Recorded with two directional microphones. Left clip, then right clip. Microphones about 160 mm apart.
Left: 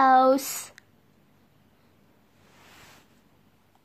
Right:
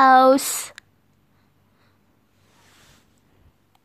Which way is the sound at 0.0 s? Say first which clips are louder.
Right 5 dB; 15° right (ahead or behind).